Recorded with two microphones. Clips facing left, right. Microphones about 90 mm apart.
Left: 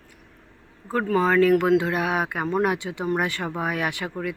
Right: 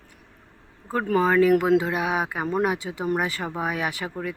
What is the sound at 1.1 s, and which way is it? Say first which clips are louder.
Speech: even; 15° right (ahead or behind).